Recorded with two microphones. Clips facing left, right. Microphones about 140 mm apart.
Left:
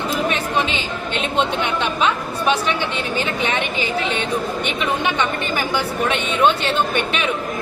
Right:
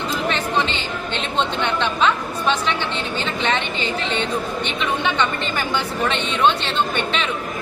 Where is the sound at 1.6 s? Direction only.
10° left (ahead or behind).